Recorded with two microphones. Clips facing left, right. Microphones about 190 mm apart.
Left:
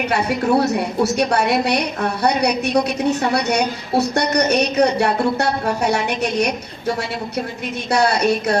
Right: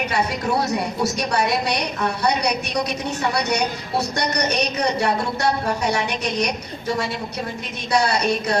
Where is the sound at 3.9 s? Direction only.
60° left (ahead or behind).